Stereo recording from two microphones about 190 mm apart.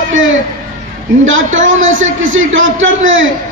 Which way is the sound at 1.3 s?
90° right.